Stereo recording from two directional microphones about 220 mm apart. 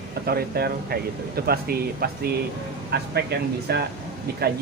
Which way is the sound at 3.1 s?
50° right (ahead or behind).